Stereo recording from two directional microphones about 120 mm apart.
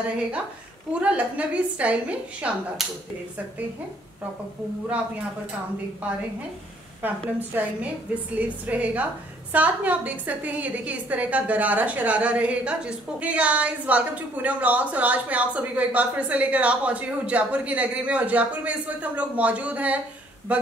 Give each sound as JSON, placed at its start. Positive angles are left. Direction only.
{"t": 0.9, "sound": "a woman's voice", "side_deg": -10}
{"t": 7.0, "sound": "a woman's voice", "side_deg": -15}